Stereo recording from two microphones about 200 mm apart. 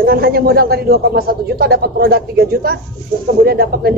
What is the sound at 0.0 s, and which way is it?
A man's voice, 50° right (ahead or behind).